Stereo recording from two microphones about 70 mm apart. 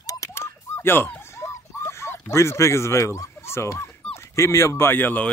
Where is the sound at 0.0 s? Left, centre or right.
Left.